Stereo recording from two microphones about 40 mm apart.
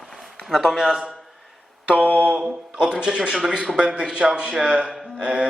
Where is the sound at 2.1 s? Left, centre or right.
Right.